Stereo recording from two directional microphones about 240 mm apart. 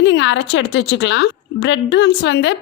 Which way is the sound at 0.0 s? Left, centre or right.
Left.